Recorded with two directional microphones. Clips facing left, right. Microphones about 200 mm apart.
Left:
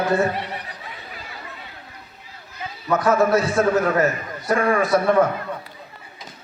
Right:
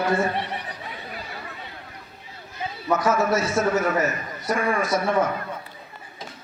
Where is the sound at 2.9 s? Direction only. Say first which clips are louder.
Left 4 dB; 60° left (ahead or behind).